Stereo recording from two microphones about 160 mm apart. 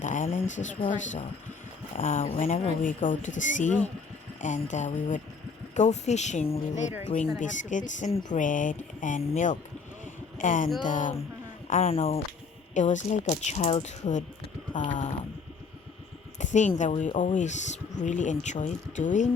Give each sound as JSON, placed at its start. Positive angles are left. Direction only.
{"t": 0.0, "sound": "a sound", "side_deg": 50}
{"t": 0.4, "sound": "speech", "side_deg": 50}
{"t": 10.3, "sound": "a sound", "side_deg": 55}
{"t": 10.8, "sound": "speech", "side_deg": 55}
{"t": 11.7, "sound": "speech", "side_deg": 40}
{"t": 12.7, "sound": "speech", "side_deg": 50}
{"t": 16.4, "sound": "speech", "side_deg": 50}